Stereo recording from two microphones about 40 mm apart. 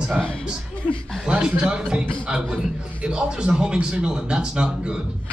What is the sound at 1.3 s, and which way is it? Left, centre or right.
Speech, right.